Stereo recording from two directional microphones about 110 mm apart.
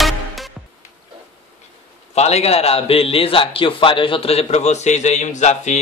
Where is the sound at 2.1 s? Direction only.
75° left (ahead or behind).